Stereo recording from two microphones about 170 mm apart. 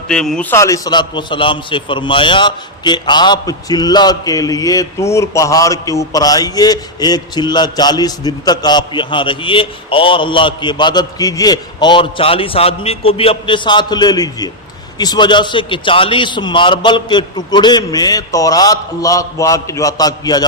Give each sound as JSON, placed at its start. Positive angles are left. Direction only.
{"t": 0.1, "sound": "a man's voice", "side_deg": 5}
{"t": 0.5, "sound": "a man's voice", "side_deg": 20}